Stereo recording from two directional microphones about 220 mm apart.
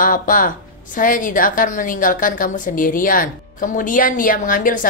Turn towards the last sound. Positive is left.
turn(degrees=40)  # may be behind; listen again after turning